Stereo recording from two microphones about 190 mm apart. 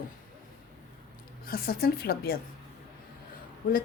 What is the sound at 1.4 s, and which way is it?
Speech, 50° left (ahead or behind).